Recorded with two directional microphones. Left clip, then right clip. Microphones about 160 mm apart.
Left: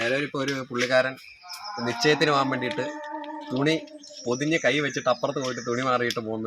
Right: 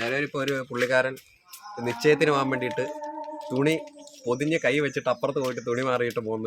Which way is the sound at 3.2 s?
35° right (ahead or behind).